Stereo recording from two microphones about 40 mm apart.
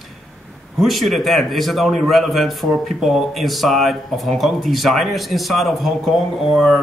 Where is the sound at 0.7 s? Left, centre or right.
Centre.